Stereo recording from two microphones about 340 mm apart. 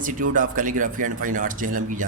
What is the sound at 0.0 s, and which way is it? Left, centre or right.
Speech, right.